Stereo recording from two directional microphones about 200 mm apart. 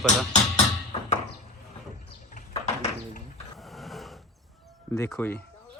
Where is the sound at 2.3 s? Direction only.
40° left (ahead or behind).